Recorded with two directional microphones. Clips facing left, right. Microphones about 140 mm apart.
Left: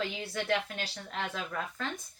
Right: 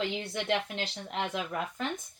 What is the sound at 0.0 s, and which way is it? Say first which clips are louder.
Speech: right 2 dB; 20° right (ahead or behind).